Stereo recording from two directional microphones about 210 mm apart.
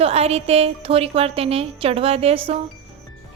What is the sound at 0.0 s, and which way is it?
A woman's voice, 30° right (ahead or behind).